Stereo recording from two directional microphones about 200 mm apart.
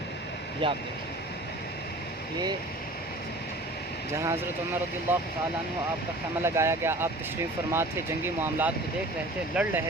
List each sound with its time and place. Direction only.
0.6 s speech: 25° right (ahead or behind)
4.1 s speech: 15° right (ahead or behind)
6.4 s speech: 15° right (ahead or behind)